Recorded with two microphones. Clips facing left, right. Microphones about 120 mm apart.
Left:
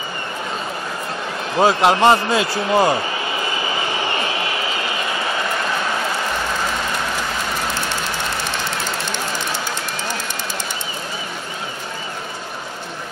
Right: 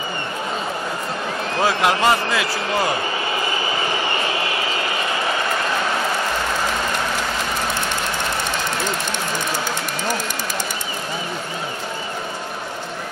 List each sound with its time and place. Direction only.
1.6 s speech: 20° left (ahead or behind)